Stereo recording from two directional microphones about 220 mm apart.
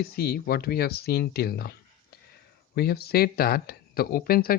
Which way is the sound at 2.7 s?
45° left (ahead or behind).